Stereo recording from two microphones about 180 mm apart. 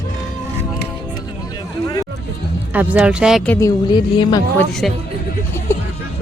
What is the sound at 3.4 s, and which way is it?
Speech, 10° left (ahead or behind).